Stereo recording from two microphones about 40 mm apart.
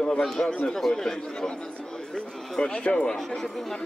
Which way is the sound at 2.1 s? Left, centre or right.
Left.